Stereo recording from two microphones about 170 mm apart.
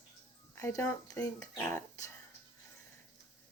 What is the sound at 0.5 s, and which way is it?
A woman's voice, 15° left (ahead or behind).